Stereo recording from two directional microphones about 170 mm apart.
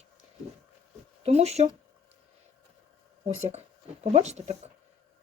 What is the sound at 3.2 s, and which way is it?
Speech, 40° right (ahead or behind).